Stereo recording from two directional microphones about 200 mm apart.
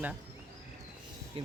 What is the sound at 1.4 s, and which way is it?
Speech, 25° right (ahead or behind).